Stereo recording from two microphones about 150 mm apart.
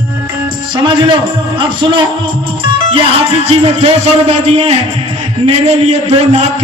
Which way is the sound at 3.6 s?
40° right (ahead or behind).